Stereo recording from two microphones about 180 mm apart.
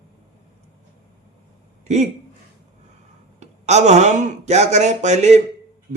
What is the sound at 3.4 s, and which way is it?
A man's voice, 40° right (ahead or behind).